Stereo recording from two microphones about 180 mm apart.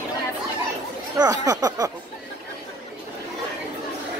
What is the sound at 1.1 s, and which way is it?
Speech, 20° right (ahead or behind).